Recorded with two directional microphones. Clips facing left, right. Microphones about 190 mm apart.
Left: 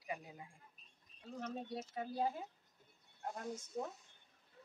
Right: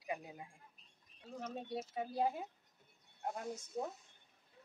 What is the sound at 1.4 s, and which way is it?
Speech, 10° right (ahead or behind).